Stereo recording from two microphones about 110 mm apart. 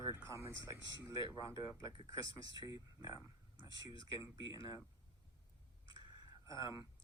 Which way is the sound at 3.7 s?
50° left (ahead or behind).